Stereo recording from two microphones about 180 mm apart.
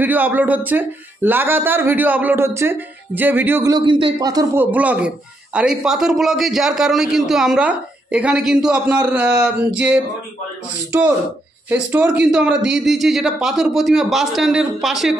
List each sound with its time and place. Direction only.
0.0 s speech: 10° right (ahead or behind)
3.7 s a man's voice: 25° right (ahead or behind)
4.6 s a man's voice: 10° right (ahead or behind)
10.9 s a man's voice: 10° right (ahead or behind)